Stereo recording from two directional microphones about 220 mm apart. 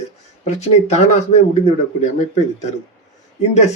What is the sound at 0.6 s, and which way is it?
Speech, 30° left (ahead or behind).